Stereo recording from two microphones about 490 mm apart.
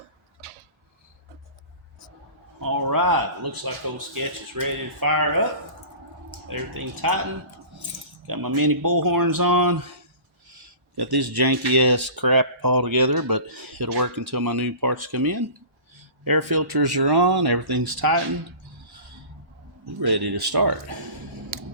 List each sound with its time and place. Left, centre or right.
2.6 s speech: right
6.5 s speech: right
8.3 s speech: right
10.9 s speech: right
20.0 s speech: right
21.5 s scissors: right